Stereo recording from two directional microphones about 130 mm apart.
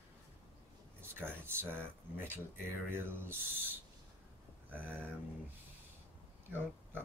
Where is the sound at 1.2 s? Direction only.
15° right (ahead or behind).